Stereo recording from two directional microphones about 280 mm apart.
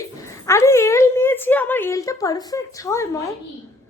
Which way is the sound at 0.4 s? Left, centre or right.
Centre.